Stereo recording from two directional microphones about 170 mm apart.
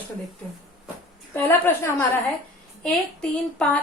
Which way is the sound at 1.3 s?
15° left (ahead or behind).